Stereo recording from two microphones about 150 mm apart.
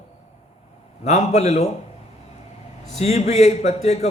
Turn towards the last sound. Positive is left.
turn(degrees=45)  # may be behind; listen again after turning